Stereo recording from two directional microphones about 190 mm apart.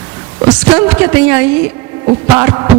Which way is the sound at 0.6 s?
5° right (ahead or behind).